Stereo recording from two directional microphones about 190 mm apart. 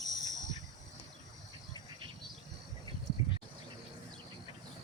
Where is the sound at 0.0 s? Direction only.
20° left (ahead or behind).